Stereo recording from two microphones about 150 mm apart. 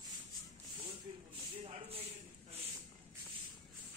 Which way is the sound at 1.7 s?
45° right (ahead or behind).